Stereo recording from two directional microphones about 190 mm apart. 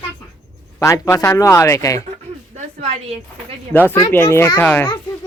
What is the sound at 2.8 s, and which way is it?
Speech, 35° right (ahead or behind).